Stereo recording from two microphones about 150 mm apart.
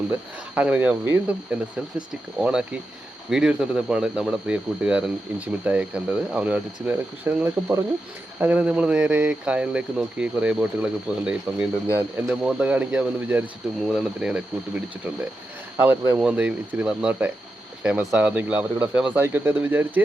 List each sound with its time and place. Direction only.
0.1 s speech: 10° right (ahead or behind)
15.8 s speech: 15° right (ahead or behind)